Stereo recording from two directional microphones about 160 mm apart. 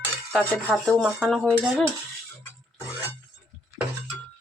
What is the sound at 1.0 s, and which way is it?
Speech, 5° right (ahead or behind).